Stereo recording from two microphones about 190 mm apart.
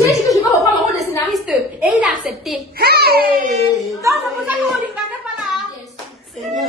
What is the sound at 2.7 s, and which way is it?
Speech, 55° right (ahead or behind).